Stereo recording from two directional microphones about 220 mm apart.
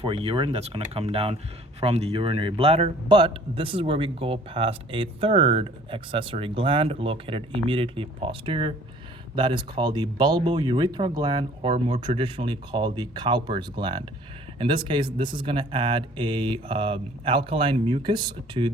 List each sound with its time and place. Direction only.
0.0 s a man's voice: 25° right (ahead or behind)